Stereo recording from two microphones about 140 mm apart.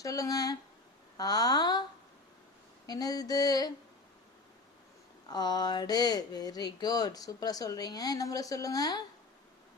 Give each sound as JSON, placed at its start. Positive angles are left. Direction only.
{"t": 0.0, "sound": "speech", "side_deg": 25}
{"t": 2.8, "sound": "speech", "side_deg": 30}
{"t": 5.3, "sound": "speech", "side_deg": 30}